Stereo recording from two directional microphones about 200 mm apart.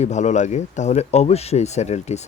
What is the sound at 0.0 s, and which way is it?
Speech, 35° left (ahead or behind).